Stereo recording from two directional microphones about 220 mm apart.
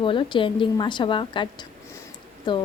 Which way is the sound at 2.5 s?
20° left (ahead or behind).